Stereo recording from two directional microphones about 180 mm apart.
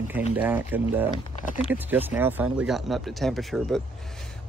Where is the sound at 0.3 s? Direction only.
10° right (ahead or behind).